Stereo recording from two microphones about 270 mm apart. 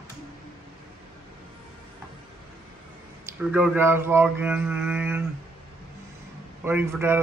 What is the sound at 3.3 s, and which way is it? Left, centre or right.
Speech, centre.